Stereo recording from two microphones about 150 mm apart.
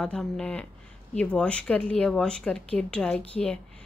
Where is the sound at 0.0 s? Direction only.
5° left (ahead or behind).